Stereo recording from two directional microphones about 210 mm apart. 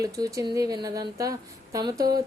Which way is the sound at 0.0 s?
15° right (ahead or behind).